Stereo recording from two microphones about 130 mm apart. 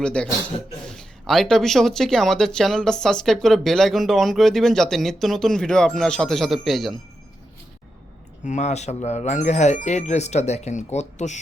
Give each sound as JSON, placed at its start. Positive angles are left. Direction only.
{"t": 0.0, "sound": "a man's voice", "side_deg": 5}
{"t": 8.4, "sound": "speech", "side_deg": 65}